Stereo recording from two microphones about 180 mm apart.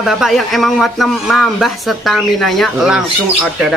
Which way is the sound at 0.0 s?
Centre (ahead or behind).